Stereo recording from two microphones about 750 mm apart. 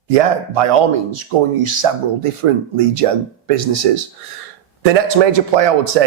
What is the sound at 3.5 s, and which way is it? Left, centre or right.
Speech, right.